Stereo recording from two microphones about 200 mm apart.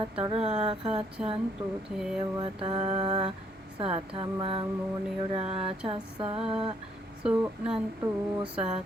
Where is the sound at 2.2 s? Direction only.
25° right (ahead or behind).